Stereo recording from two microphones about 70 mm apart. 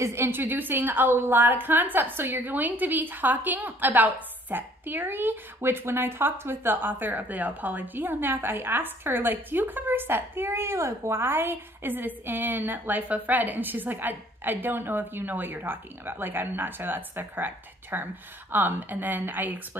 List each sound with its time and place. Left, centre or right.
0.0 s a woman's voice: right